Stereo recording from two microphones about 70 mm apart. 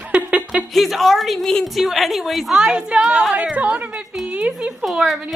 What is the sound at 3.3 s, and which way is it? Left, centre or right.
Speech, right.